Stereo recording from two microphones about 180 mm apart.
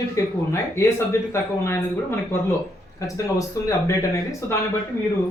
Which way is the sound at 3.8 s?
15° left (ahead or behind).